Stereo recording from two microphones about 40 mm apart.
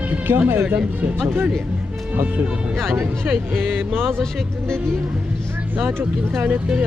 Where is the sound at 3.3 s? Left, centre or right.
Right.